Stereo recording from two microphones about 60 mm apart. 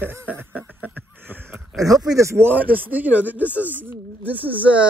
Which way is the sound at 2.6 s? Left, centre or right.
Right.